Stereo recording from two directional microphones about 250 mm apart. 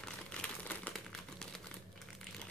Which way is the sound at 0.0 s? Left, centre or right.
Centre.